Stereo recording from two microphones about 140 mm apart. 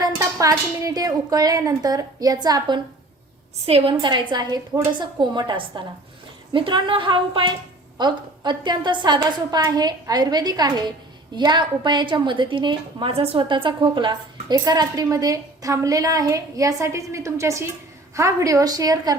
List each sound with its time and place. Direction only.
0.0 s a woman's voice: 25° right (ahead or behind)
3.7 s a woman's voice: 45° right (ahead or behind)
4.1 s a woman's voice: 30° right (ahead or behind)